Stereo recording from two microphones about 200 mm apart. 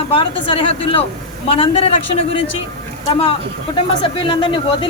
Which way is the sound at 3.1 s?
30° left (ahead or behind).